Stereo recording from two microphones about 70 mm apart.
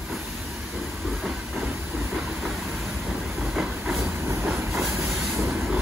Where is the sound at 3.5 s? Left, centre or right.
Centre.